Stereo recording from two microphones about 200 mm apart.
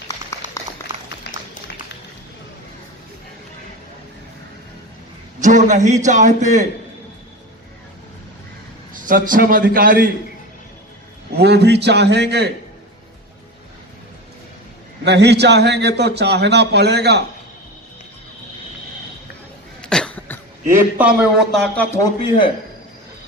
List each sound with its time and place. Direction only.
0.1 s a sound: 15° left (ahead or behind)
5.4 s a man's voice: 40° right (ahead or behind)
8.9 s a man's voice: 45° right (ahead or behind)
11.3 s a man's voice: 55° right (ahead or behind)
15.0 s a man's voice: 55° right (ahead or behind)
19.8 s cough: 5° left (ahead or behind)
20.7 s speech: 5° right (ahead or behind)